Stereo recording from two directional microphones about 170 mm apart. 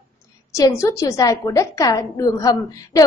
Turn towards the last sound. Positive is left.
turn(degrees=20)  # may be behind; listen again after turning